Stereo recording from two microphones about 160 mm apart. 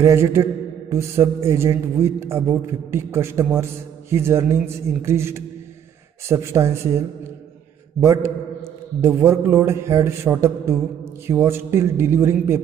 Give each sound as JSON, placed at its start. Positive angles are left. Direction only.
{"t": 0.0, "sound": "mantra", "side_deg": -15}
{"t": 9.0, "sound": "mantra", "side_deg": -15}